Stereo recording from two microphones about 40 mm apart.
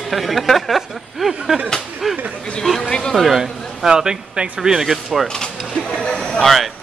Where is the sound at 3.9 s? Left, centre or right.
Centre.